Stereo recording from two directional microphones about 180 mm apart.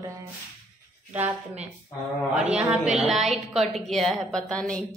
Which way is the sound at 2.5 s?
5° right (ahead or behind).